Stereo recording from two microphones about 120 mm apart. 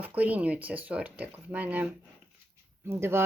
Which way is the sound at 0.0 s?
15° right (ahead or behind).